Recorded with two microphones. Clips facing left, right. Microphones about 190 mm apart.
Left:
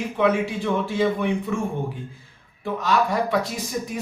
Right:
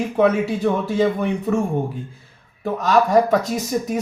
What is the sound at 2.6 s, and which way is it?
Speech, 40° right (ahead or behind).